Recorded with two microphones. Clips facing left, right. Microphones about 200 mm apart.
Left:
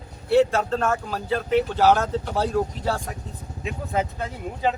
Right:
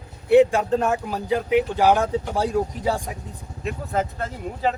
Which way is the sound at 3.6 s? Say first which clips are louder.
Right 1 dB; centre (ahead or behind).